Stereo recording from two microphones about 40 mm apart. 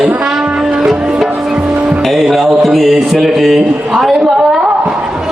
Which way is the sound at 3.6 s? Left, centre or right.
Centre.